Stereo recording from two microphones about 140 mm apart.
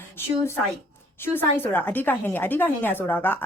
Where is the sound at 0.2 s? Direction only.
15° left (ahead or behind).